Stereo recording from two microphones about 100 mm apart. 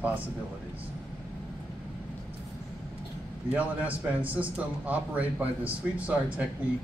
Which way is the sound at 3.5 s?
15° right (ahead or behind).